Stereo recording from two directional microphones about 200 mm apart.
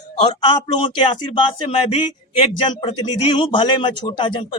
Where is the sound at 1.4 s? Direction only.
25° left (ahead or behind).